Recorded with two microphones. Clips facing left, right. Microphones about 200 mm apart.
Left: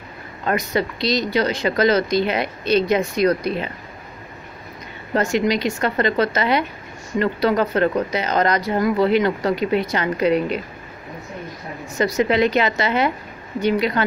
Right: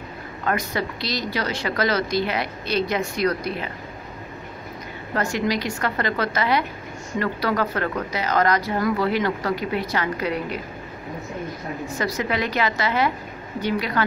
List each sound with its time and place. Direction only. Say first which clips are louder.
0.5 s speech: left 4 dB; 20° left (ahead or behind)
5.1 s speech: left 4 dB; 20° left (ahead or behind)
12.0 s speech: left 8 dB; 25° left (ahead or behind)